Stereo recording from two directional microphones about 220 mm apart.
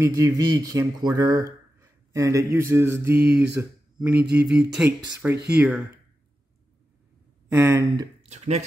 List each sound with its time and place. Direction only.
0.0 s speech: 15° right (ahead or behind)
7.4 s speech: 10° right (ahead or behind)
8.3 s speech: 30° right (ahead or behind)